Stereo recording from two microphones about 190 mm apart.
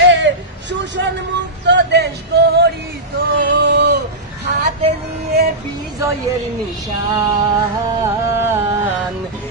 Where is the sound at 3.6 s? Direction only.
65° right (ahead or behind).